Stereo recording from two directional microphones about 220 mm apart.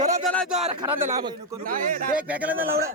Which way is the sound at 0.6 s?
20° right (ahead or behind).